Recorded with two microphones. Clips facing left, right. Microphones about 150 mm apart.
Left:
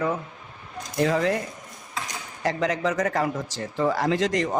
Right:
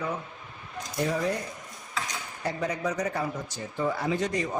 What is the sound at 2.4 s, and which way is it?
Speech, 90° left.